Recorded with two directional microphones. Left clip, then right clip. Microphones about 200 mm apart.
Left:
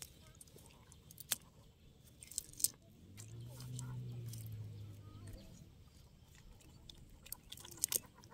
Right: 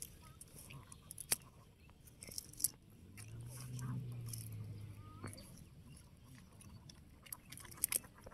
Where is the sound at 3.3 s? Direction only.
15° left (ahead or behind).